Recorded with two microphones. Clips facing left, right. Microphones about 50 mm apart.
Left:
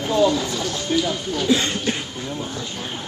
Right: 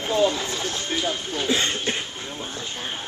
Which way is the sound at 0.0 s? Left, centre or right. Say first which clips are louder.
Left 3 dB; right.